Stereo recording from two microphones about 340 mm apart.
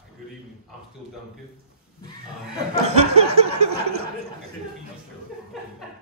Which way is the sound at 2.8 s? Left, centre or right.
Centre.